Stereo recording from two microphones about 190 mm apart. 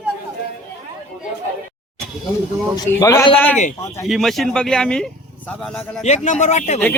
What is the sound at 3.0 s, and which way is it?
A man's voice, 20° left (ahead or behind).